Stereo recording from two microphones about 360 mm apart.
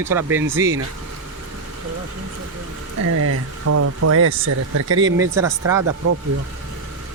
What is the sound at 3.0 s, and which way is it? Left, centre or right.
Speech, right.